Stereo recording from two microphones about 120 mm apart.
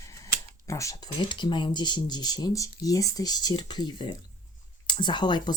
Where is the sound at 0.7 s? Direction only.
25° left (ahead or behind).